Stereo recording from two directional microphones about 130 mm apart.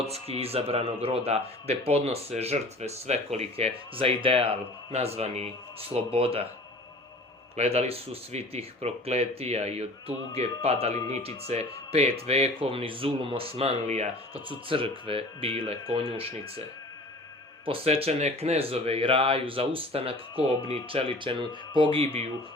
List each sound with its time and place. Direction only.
0.0 s speech: 50° right (ahead or behind)
7.5 s speech: 55° right (ahead or behind)
14.7 s speech: 45° right (ahead or behind)
17.7 s speech: 50° right (ahead or behind)